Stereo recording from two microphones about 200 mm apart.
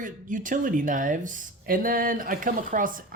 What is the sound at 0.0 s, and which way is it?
Speech, 40° right (ahead or behind).